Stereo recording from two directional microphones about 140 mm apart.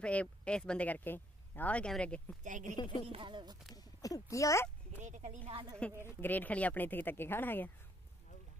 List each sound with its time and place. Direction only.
0.0 s speech: 10° left (ahead or behind)
2.4 s speech: 65° right (ahead or behind)
2.7 s a woman's voice: 35° left (ahead or behind)
3.1 s speech: 35° right (ahead or behind)
3.7 s speech: 25° left (ahead or behind)
5.0 s speech: 60° right (ahead or behind)
5.4 s speech: 40° right (ahead or behind)
6.0 s speech: 15° left (ahead or behind)